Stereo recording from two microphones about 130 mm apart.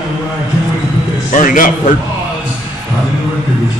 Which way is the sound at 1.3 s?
90° left.